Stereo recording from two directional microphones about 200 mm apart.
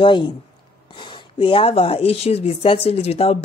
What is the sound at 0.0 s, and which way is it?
A woman's voice, 25° left (ahead or behind).